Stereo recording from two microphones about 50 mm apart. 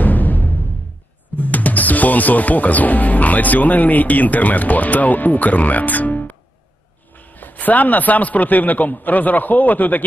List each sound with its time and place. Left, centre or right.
0.0 s music: left
1.3 s speech: left